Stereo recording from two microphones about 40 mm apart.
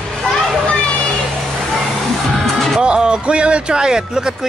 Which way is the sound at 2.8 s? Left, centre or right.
Right.